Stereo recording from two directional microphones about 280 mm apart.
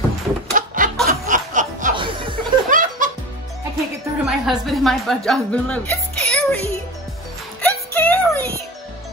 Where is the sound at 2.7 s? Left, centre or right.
Right.